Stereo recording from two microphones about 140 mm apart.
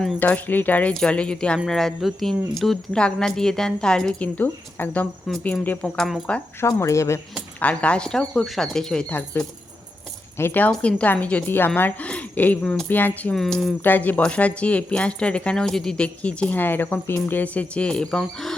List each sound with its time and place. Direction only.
0.2 s speech: 10° left (ahead or behind)
6.7 s speech: 20° left (ahead or behind)
7.6 s speech: 10° left (ahead or behind)
13.8 s speech: 15° left (ahead or behind)